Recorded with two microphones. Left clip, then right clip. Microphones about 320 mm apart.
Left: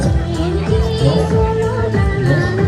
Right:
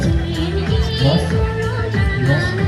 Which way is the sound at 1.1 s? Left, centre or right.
Centre.